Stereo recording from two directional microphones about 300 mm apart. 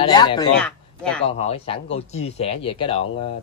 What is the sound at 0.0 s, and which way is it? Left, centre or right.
Speech, centre.